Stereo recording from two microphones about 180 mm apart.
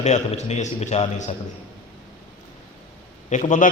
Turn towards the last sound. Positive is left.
turn(degrees=45)  # may be behind; listen again after turning